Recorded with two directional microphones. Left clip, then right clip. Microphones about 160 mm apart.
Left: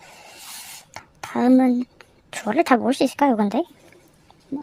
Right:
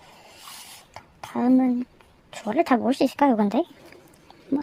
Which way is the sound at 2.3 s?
15° left (ahead or behind).